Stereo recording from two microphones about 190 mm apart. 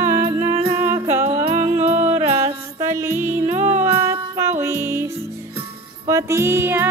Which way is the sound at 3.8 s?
10° right (ahead or behind).